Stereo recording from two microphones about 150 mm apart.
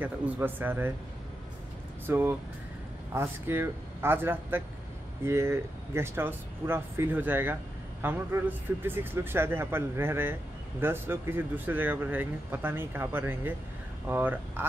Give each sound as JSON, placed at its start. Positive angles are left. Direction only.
{"t": 0.0, "sound": "speech", "side_deg": -10}
{"t": 2.0, "sound": "speech", "side_deg": -15}